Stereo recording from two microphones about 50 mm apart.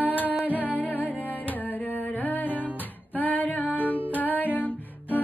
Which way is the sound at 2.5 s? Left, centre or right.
Right.